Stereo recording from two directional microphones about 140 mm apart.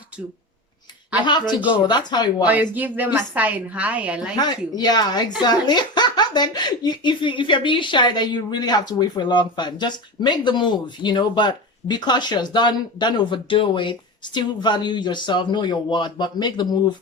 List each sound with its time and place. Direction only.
1.2 s speech: 30° left (ahead or behind)
2.4 s a woman's voice: 10° right (ahead or behind)
4.4 s speech: 30° left (ahead or behind)